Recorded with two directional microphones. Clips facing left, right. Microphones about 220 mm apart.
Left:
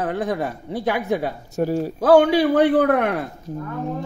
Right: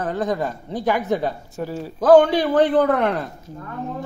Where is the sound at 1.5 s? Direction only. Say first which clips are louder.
Left 7 dB; 45° left (ahead or behind).